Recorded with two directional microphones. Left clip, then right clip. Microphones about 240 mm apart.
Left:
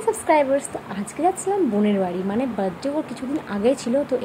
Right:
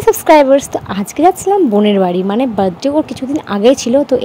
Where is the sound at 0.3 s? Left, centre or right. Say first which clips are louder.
Right 11 dB; right.